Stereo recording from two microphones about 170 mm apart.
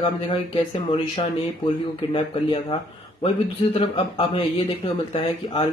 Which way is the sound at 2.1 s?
35° left (ahead or behind).